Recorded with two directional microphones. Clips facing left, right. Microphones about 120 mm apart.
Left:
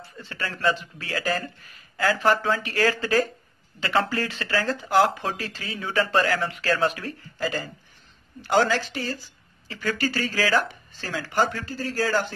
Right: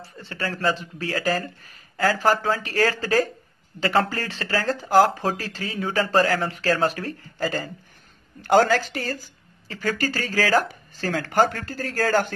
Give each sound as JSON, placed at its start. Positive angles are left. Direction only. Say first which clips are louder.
{"t": 0.0, "sound": "speech", "louder": "right 3 dB", "side_deg": -35}